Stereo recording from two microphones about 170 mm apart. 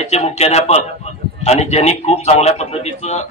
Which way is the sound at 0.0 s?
40° left (ahead or behind).